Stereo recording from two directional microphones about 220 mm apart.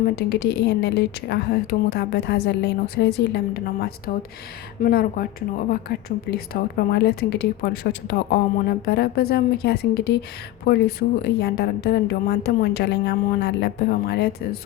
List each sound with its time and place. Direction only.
0.2 s a woman's voice: 50° left (ahead or behind)